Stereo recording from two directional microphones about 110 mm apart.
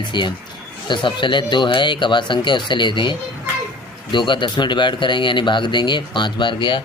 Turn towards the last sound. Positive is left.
turn(degrees=45)  # may be behind; listen again after turning